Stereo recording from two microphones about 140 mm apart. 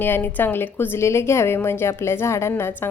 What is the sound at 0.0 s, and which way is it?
A woman's voice, 15° left (ahead or behind).